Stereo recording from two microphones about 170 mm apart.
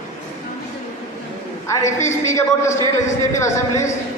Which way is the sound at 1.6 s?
15° left (ahead or behind).